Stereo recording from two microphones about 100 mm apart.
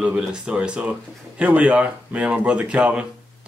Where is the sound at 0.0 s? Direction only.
10° right (ahead or behind).